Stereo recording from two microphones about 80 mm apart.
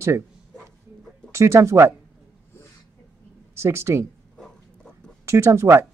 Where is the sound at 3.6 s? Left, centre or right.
Right.